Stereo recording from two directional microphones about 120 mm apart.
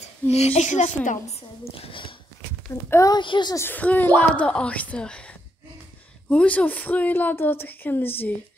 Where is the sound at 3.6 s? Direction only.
15° left (ahead or behind).